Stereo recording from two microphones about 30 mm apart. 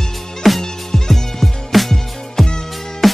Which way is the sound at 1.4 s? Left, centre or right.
Centre.